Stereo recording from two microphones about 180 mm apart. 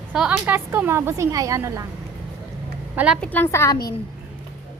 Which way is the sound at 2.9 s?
5° right (ahead or behind).